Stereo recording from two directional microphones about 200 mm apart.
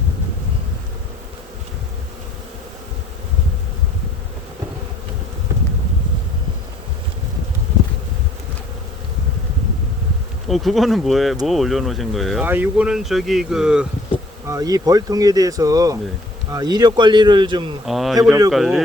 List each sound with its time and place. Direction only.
10.5 s speech: centre (ahead or behind)
14.4 s speech: 15° right (ahead or behind)
17.8 s speech: centre (ahead or behind)
18.2 s speech: 15° right (ahead or behind)
18.5 s speech: centre (ahead or behind)